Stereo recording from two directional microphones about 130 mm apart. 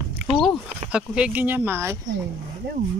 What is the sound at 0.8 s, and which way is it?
A woman's voice, 10° right (ahead or behind).